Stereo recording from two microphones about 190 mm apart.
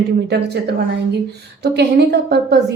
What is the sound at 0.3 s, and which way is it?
Speech, 60° right (ahead or behind).